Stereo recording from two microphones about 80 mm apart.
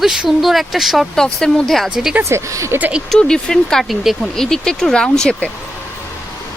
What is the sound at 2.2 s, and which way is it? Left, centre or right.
Speech, right.